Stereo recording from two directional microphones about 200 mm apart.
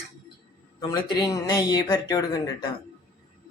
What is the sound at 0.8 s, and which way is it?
Speech, 20° left (ahead or behind).